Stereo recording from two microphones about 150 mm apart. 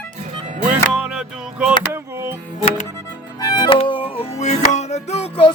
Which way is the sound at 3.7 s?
35° left (ahead or behind).